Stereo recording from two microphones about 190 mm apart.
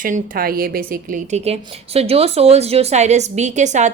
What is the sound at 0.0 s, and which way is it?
A woman's voice, 45° right (ahead or behind).